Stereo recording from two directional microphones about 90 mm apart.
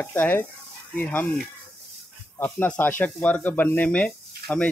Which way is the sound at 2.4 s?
20° left (ahead or behind).